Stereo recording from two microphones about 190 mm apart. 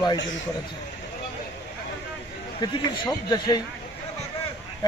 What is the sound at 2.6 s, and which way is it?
A man's voice, 20° left (ahead or behind).